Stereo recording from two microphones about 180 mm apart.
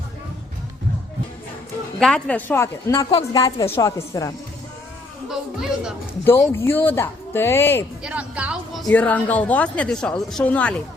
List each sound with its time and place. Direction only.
2.0 s speech: 5° left (ahead or behind)
5.3 s speech: 5° right (ahead or behind)
6.2 s speech: 15° left (ahead or behind)
8.0 s speech: 5° right (ahead or behind)